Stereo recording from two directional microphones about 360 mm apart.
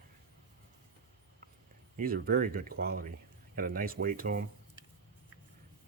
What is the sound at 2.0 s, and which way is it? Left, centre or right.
Speech, right.